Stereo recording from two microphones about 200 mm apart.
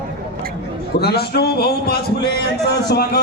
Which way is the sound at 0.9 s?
55° left (ahead or behind).